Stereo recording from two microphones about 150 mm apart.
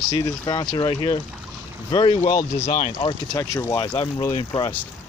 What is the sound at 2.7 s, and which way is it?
Speech, 65° left (ahead or behind).